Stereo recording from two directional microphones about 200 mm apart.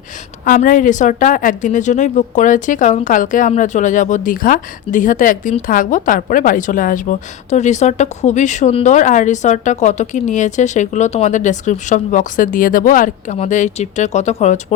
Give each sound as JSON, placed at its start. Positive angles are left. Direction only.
{"t": 0.4, "sound": "a woman's voice", "side_deg": 40}